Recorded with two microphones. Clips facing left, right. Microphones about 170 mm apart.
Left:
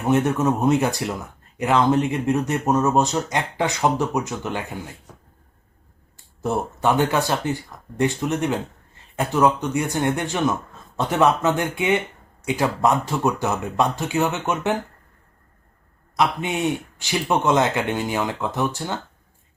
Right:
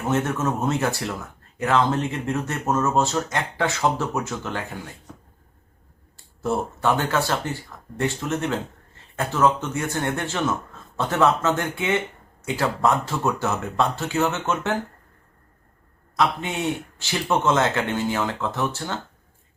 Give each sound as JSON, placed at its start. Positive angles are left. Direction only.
{"t": 0.0, "sound": "speech", "side_deg": 15}
{"t": 6.4, "sound": "speech", "side_deg": 15}
{"t": 16.1, "sound": "speech", "side_deg": 15}